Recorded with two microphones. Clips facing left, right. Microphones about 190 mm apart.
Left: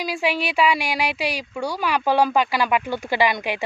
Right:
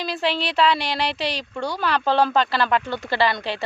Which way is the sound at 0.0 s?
10° left (ahead or behind).